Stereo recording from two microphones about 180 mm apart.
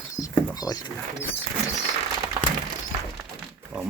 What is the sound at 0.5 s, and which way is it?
Speech, 20° left (ahead or behind).